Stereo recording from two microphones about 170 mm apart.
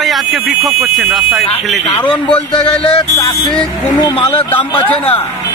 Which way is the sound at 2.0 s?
30° left (ahead or behind).